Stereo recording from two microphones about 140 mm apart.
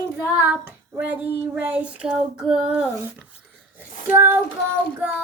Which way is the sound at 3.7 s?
15° right (ahead or behind).